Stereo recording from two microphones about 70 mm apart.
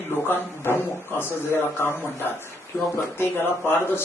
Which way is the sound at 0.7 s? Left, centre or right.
Left.